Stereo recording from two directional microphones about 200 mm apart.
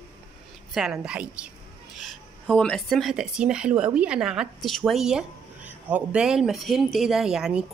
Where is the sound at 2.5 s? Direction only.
5° left (ahead or behind).